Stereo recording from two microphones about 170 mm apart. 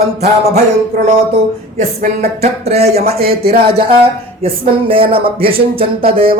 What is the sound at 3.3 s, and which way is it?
Speech, 65° right (ahead or behind).